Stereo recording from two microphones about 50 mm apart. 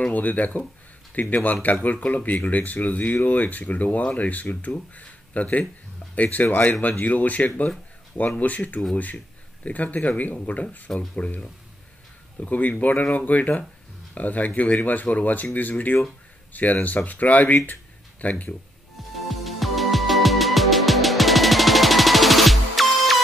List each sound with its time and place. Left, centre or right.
0.0 s speech: left
12.4 s speech: left
19.1 s music: centre